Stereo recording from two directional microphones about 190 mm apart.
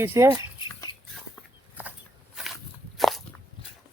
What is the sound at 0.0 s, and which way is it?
Speech, 15° right (ahead or behind).